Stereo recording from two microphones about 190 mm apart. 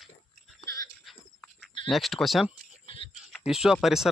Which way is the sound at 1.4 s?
5° left (ahead or behind).